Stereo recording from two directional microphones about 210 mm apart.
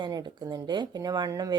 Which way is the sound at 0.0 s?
20° right (ahead or behind).